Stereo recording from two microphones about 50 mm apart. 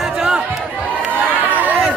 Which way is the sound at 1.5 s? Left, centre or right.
Right.